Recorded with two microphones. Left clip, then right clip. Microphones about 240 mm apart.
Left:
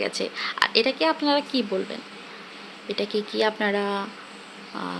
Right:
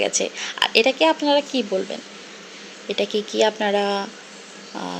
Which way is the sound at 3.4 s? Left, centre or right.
Centre.